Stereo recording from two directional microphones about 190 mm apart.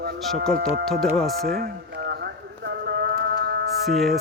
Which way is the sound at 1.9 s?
60° right (ahead or behind).